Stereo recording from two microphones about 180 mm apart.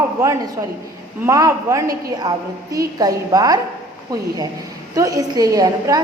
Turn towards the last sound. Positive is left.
turn(degrees=-20)  # may be behind; listen again after turning